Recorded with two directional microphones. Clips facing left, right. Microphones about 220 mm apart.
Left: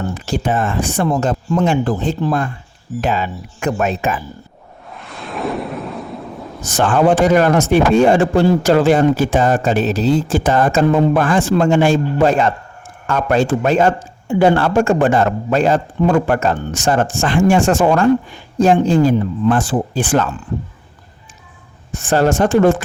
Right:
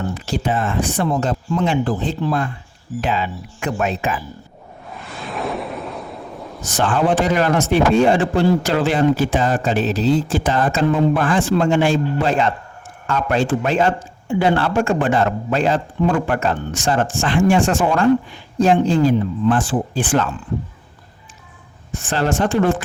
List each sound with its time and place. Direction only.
0.1 s a man's voice: 50° left (ahead or behind)
4.9 s a sound: centre (ahead or behind)
6.6 s a man's voice: 50° left (ahead or behind)
21.9 s a man's voice: 45° left (ahead or behind)